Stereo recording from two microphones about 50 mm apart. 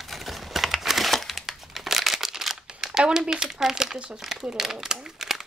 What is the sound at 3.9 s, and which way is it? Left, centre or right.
Speech, right.